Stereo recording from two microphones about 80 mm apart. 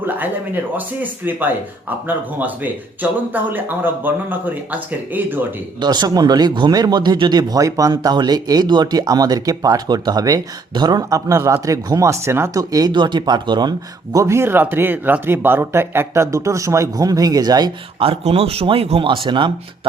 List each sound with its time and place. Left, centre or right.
0.0 s speech: right
5.8 s speech: right
6.7 s speech: right
8.1 s speech: right
12.5 s speech: right
12.9 s speech: right
14.2 s speech: right
18.6 s speech: right